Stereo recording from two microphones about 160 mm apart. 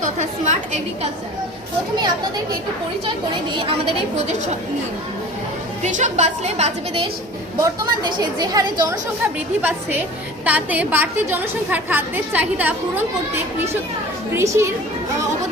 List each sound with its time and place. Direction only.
0.0 s a sound: 50° right (ahead or behind)
5.8 s a woman's voice: 45° right (ahead or behind)
7.6 s a woman's voice: 25° right (ahead or behind)
14.3 s a woman's voice: 15° right (ahead or behind)